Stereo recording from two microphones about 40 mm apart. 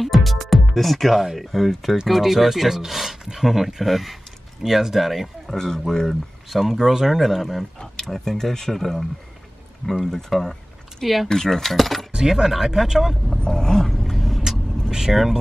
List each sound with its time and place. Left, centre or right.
0.0 s speech: centre
5.6 s speech: centre
6.5 s speech: centre
7.8 s speech: centre
9.8 s speech: left
10.3 s speech: centre
11.2 s speech: centre
12.1 s speech: centre
13.5 s speech: centre
13.8 s vehicle: centre
14.9 s speech: centre